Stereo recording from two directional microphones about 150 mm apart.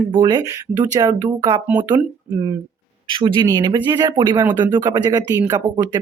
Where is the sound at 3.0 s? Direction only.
35° right (ahead or behind).